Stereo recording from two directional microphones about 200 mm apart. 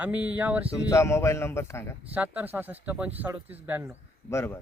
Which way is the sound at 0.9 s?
15° left (ahead or behind).